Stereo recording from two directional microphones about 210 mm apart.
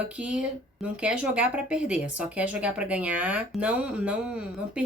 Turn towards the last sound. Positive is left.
turn(degrees=-5)  # may be behind; listen again after turning